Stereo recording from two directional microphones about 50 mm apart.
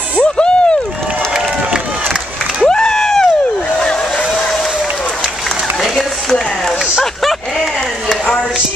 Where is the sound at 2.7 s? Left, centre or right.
Centre.